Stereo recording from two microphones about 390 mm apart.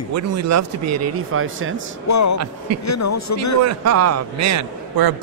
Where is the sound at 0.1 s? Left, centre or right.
Right.